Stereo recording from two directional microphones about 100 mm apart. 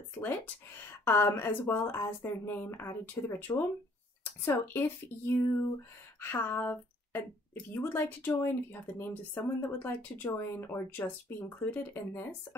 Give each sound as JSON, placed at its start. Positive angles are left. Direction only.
{"t": 0.7, "sound": "speech", "side_deg": 25}